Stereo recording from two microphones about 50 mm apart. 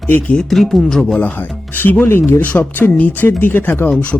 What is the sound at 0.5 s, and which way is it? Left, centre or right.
Speech, centre.